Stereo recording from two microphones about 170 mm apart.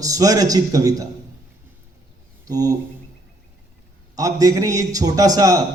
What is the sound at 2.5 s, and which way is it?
Speech, 20° right (ahead or behind).